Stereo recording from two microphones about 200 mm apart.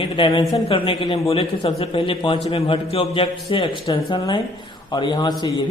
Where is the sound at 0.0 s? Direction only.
25° left (ahead or behind).